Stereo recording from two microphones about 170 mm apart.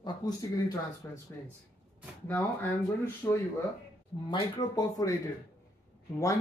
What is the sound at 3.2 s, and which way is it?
Speech, 10° left (ahead or behind).